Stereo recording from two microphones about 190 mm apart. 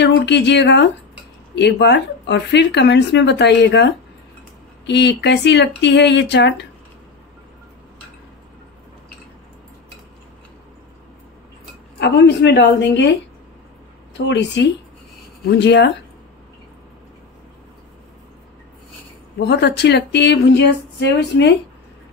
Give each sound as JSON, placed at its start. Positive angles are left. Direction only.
{"t": 0.0, "sound": "speech", "side_deg": 65}
{"t": 12.0, "sound": "speech", "side_deg": 65}
{"t": 14.1, "sound": "speech", "side_deg": 70}
{"t": 19.3, "sound": "speech", "side_deg": 60}